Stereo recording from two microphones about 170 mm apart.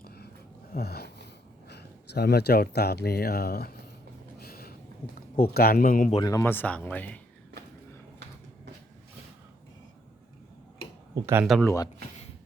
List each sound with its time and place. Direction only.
0.0 s a sound: 65° left (ahead or behind)
1.6 s speech: 75° left (ahead or behind)
4.4 s a sound: 65° left (ahead or behind)
5.4 s speech: 65° left (ahead or behind)
6.2 s speech: 15° left (ahead or behind)
11.1 s speech: 15° right (ahead or behind)
11.6 s speech: 20° left (ahead or behind)